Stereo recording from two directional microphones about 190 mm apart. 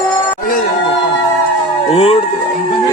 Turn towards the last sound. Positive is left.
turn(degrees=30)  # may be behind; listen again after turning